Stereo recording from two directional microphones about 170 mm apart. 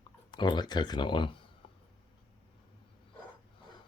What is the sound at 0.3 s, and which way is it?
Speech, 25° left (ahead or behind).